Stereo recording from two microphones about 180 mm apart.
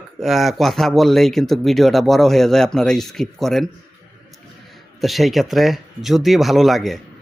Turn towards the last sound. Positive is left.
turn(degrees=0)  # may be behind; listen again after turning